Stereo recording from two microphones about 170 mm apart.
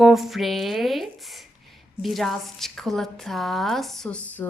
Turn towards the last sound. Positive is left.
turn(degrees=5)  # may be behind; listen again after turning